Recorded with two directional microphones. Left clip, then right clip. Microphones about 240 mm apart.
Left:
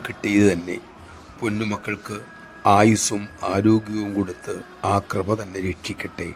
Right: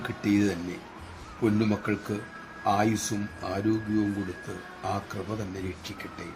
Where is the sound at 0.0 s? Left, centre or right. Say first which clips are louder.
Left 8 dB; left.